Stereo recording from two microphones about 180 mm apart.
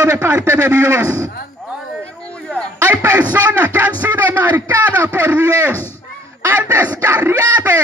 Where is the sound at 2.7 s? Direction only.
10° right (ahead or behind).